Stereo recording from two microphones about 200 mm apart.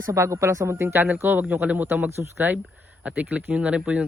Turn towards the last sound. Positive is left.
turn(degrees=-5)  # may be behind; listen again after turning